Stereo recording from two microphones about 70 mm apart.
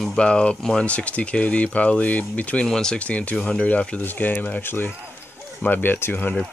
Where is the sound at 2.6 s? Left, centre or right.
Centre.